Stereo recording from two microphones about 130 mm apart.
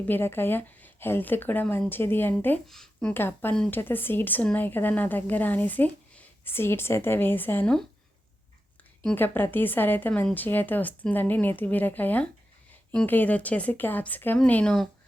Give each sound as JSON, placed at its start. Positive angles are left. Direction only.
{"t": 0.0, "sound": "a woman's voice", "side_deg": 15}
{"t": 2.6, "sound": "speech", "side_deg": 5}
{"t": 3.1, "sound": "a woman's voice", "side_deg": 15}
{"t": 3.5, "sound": "speech", "side_deg": 5}
{"t": 3.8, "sound": "a woman's voice", "side_deg": 15}
{"t": 9.1, "sound": "a woman's voice", "side_deg": 15}